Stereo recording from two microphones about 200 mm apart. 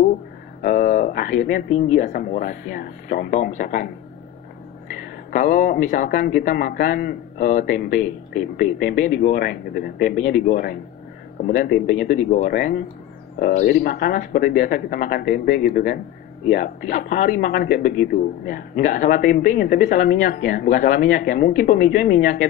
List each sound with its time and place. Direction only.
0.6 s speech: 40° left (ahead or behind)
5.3 s speech: 40° left (ahead or behind)